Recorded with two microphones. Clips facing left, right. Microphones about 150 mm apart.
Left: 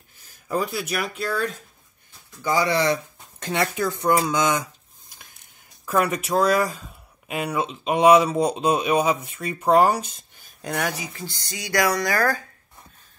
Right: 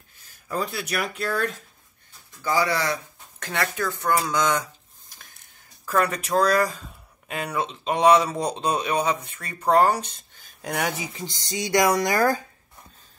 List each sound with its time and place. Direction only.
0.6 s speech: 5° left (ahead or behind)
2.4 s speech: 20° left (ahead or behind)
5.9 s speech: 10° left (ahead or behind)
10.7 s speech: 20° right (ahead or behind)